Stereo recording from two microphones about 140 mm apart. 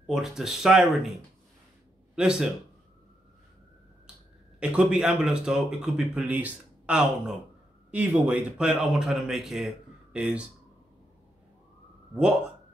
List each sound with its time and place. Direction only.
0.0 s speech: centre (ahead or behind)
2.1 s speech: 5° right (ahead or behind)
4.6 s speech: 5° right (ahead or behind)